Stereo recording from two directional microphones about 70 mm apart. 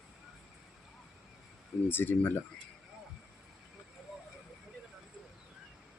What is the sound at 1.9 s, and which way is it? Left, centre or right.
Speech, left.